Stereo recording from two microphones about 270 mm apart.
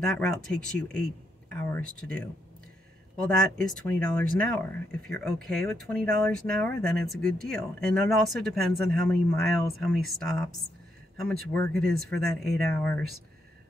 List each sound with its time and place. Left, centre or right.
0.0 s speech: centre
3.2 s speech: centre
11.6 s speech: right
12.0 s speech: centre